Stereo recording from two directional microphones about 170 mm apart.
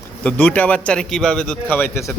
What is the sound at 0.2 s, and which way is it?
A man's voice, 10° left (ahead or behind).